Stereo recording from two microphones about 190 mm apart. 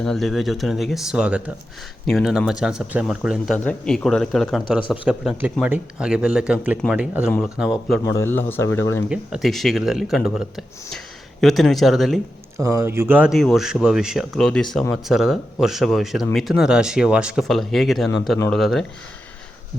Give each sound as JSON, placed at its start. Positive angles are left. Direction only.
{"t": 0.0, "sound": "speech", "side_deg": 0}
{"t": 8.0, "sound": "speech", "side_deg": 15}
{"t": 9.0, "sound": "speech", "side_deg": 0}
{"t": 12.5, "sound": "speech", "side_deg": -15}